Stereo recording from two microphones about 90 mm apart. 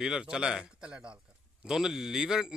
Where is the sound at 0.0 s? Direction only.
5° right (ahead or behind).